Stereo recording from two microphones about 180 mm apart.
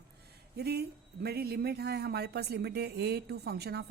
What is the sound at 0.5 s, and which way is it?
Speech, 60° right (ahead or behind).